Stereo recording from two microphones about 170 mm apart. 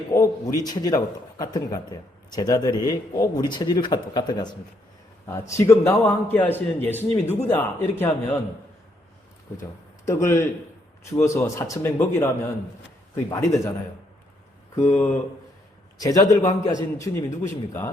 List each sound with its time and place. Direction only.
0.1 s a man's voice: 20° left (ahead or behind)
10.1 s a man's voice: 15° left (ahead or behind)
14.8 s a man's voice: 10° left (ahead or behind)
16.0 s speech: 20° left (ahead or behind)